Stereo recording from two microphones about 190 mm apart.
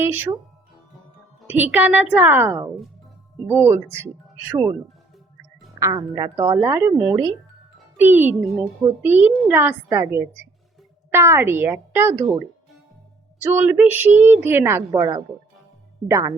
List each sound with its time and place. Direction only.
0.0 s a woman's voice: 10° right (ahead or behind)
1.5 s a woman's voice: 10° right (ahead or behind)
5.8 s a woman's voice: 20° right (ahead or behind)
13.4 s a woman's voice: 10° right (ahead or behind)